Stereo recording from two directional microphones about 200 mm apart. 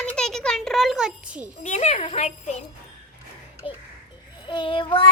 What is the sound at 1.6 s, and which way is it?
Speech, 35° left (ahead or behind).